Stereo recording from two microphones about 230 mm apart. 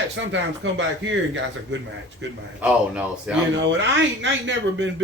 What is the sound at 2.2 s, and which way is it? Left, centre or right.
Speech, right.